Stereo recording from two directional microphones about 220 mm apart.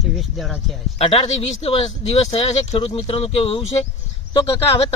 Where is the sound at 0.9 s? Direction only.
25° left (ahead or behind).